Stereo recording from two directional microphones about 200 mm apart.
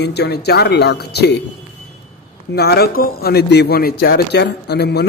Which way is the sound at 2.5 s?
55° left (ahead or behind).